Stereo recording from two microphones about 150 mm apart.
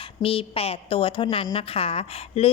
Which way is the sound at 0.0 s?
35° left (ahead or behind).